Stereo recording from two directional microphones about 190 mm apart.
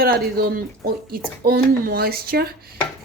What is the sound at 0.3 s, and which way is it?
Speech, 50° right (ahead or behind).